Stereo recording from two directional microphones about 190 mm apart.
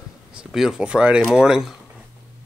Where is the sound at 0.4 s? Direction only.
Centre (ahead or behind).